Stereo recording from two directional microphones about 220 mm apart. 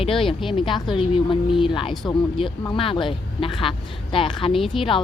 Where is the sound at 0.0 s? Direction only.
25° left (ahead or behind).